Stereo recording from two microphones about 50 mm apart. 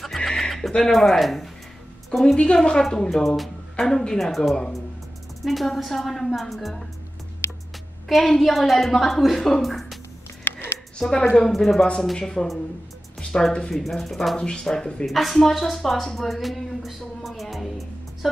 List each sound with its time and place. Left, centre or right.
0.0 s music: centre
0.3 s a woman's voice: centre
2.3 s a woman's voice: centre
7.4 s music: left
8.1 s a woman's voice: centre
10.4 s music: left
11.0 s speech: centre
11.3 s a woman's voice: centre
13.5 s a woman's voice: centre
14.3 s a woman's voice: centre
15.0 s speech: centre